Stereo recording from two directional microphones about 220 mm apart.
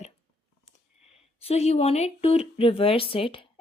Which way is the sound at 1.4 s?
30° left (ahead or behind).